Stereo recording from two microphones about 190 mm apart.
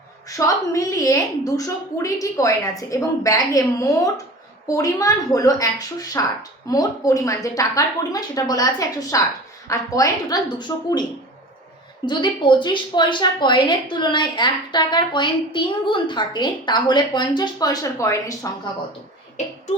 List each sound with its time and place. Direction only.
0.3 s a woman's voice: 15° left (ahead or behind)
12.0 s a woman's voice: 25° left (ahead or behind)